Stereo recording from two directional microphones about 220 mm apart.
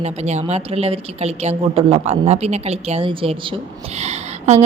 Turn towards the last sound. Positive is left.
turn(degrees=-30)  # may be behind; listen again after turning